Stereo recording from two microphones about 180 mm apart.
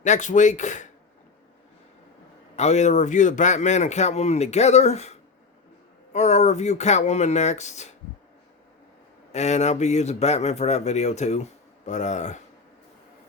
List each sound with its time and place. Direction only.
0.0 s speech: 40° left (ahead or behind)
2.6 s a man's voice: 40° left (ahead or behind)
6.1 s a man's voice: 40° left (ahead or behind)
9.3 s a man's voice: 40° left (ahead or behind)